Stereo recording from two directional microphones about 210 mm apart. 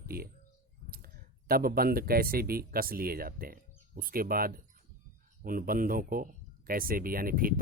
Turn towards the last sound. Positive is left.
turn(degrees=-45)  # may be behind; listen again after turning